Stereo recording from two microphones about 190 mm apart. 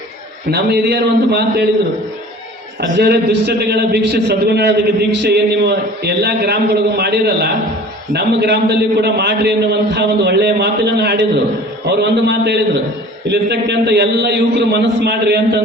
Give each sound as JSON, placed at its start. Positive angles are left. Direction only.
{"t": 0.5, "sound": "a man's voice", "side_deg": -60}
{"t": 3.0, "sound": "a man's voice", "side_deg": -60}